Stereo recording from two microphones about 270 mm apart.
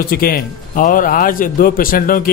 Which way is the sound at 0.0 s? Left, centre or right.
Left.